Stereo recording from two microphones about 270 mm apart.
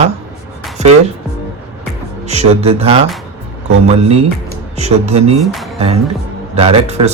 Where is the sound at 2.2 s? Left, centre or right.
Right.